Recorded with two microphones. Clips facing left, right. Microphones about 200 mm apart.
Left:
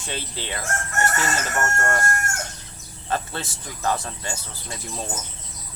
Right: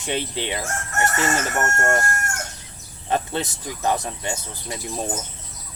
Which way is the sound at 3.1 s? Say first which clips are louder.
Right 4 dB; 20° right (ahead or behind).